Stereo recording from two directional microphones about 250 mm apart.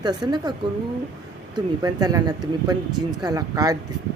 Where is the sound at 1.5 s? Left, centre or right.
Centre.